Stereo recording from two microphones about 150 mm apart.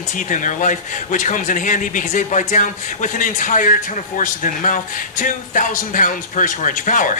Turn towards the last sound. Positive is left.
turn(degrees=60)  # may be behind; listen again after turning